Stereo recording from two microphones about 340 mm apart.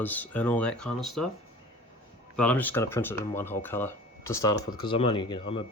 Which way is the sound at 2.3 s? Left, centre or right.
Centre.